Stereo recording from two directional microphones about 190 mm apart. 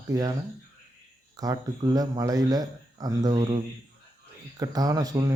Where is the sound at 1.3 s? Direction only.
20° right (ahead or behind).